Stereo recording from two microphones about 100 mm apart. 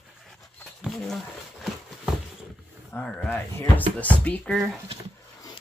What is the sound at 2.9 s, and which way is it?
Speech, 10° left (ahead or behind).